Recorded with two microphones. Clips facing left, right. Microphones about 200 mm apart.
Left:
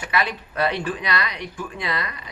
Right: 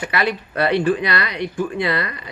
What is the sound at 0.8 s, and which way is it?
Speech, 30° right (ahead or behind).